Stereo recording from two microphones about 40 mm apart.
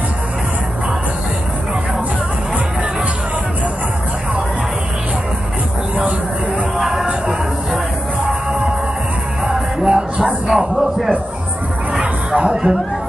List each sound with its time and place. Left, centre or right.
6.8 s music: centre
9.4 s music: right
10.4 s a sound: centre
12.0 s music: right